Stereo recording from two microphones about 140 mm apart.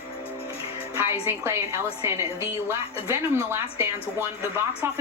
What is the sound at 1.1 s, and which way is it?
Speech, 15° right (ahead or behind).